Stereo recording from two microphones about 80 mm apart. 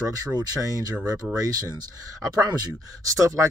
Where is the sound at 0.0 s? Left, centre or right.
Right.